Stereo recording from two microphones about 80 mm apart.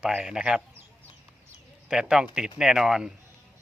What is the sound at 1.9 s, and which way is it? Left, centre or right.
Speech, centre.